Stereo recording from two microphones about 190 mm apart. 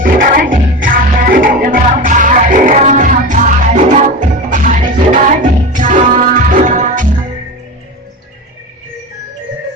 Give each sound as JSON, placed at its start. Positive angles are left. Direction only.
{"t": 0.0, "sound": "music", "side_deg": -50}